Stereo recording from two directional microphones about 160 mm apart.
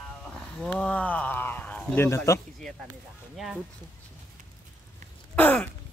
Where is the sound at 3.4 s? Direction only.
Centre (ahead or behind).